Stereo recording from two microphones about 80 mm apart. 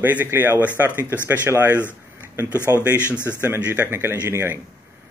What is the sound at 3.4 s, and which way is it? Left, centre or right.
A man's voice, right.